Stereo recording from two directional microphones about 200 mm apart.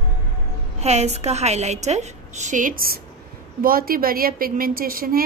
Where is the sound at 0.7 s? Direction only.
35° right (ahead or behind).